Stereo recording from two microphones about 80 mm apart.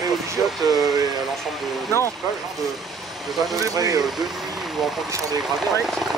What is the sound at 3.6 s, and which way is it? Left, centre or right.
Speech, right.